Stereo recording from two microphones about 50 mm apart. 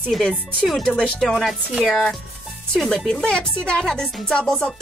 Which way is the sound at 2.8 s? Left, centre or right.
Centre.